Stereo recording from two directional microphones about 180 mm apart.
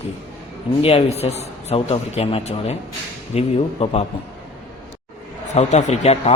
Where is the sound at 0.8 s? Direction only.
30° left (ahead or behind).